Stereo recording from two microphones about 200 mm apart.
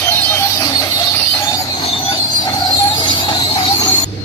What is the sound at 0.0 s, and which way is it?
Music, 10° left (ahead or behind).